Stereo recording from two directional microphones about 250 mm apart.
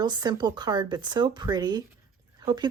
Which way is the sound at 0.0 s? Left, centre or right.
Centre.